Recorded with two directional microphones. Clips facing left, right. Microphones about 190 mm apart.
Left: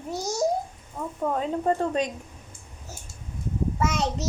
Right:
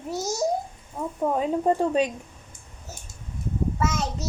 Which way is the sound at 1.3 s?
10° right (ahead or behind).